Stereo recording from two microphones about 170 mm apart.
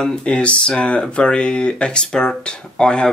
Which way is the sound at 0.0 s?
5° left (ahead or behind).